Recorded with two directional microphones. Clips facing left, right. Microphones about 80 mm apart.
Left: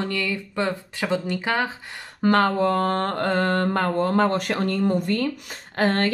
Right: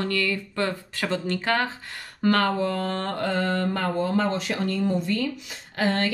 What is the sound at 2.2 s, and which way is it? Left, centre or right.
Speech, left.